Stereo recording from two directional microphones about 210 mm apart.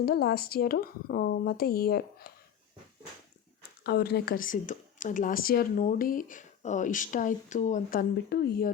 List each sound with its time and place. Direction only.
0.0 s speech: 50° left (ahead or behind)
3.8 s speech: 50° left (ahead or behind)